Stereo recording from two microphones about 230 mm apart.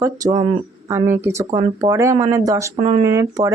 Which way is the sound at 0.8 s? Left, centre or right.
Centre.